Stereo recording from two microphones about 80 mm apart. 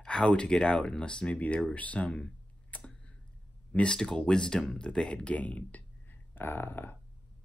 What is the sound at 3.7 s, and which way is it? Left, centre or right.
Speech, centre.